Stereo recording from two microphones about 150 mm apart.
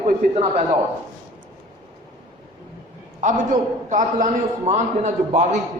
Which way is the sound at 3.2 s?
55° right (ahead or behind).